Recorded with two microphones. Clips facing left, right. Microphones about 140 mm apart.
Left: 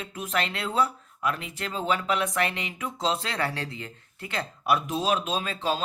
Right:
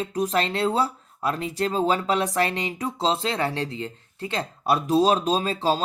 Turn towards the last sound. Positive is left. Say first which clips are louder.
# right 6 dB
turn(degrees=-35)  # may be behind; listen again after turning